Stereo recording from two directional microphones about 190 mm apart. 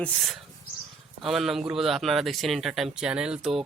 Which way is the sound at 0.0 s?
Centre (ahead or behind).